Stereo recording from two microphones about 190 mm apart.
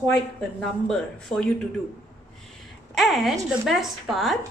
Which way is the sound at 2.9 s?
Centre (ahead or behind).